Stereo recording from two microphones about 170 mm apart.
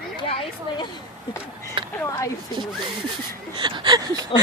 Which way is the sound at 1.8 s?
30° right (ahead or behind).